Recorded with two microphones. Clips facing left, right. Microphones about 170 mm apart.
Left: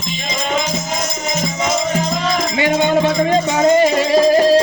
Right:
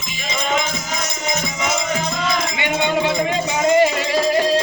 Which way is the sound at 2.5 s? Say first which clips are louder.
Left 8 dB; 40° left (ahead or behind).